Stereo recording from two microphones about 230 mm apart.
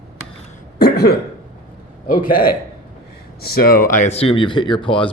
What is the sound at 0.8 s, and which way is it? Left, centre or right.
Cough, left.